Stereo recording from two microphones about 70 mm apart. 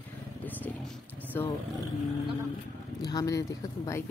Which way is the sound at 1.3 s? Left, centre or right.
Left.